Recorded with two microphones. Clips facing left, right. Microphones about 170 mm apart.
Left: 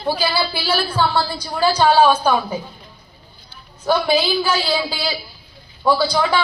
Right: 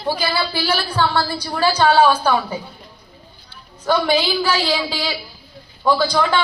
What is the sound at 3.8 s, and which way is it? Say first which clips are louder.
A woman's voice: even; 10° left (ahead or behind).